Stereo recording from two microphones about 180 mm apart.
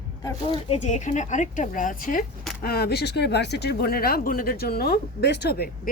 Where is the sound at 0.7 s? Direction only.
40° left (ahead or behind).